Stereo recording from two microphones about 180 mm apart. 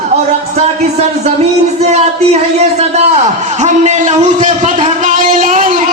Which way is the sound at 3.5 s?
40° right (ahead or behind).